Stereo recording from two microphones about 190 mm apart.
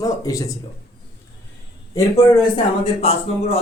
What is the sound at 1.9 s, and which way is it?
Speech, 25° left (ahead or behind).